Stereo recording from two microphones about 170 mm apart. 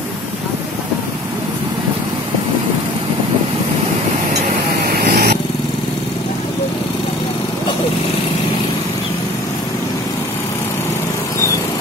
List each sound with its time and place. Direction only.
5.1 s vehicle: 75° right (ahead or behind)